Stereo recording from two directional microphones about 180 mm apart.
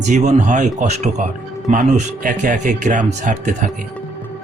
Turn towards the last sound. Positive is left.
turn(degrees=-45)  # may be behind; listen again after turning